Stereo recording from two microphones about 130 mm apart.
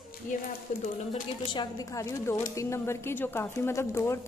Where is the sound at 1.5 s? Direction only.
25° left (ahead or behind).